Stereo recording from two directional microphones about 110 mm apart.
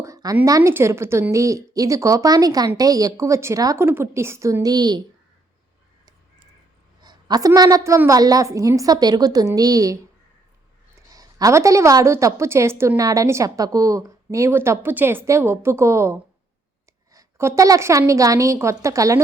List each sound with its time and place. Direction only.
0.0 s a sound: 30° right (ahead or behind)
0.4 s a woman's voice: 30° right (ahead or behind)
7.0 s a woman's voice: 40° right (ahead or behind)
11.1 s a woman's voice: 35° right (ahead or behind)